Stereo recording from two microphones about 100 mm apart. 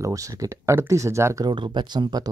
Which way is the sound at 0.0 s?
35° right (ahead or behind).